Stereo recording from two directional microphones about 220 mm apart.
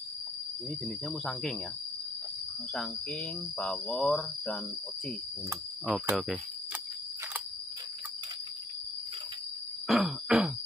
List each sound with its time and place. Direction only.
0.7 s speech: centre (ahead or behind)
2.7 s speech: 5° left (ahead or behind)
5.9 s speech: 5° right (ahead or behind)
9.8 s groan: centre (ahead or behind)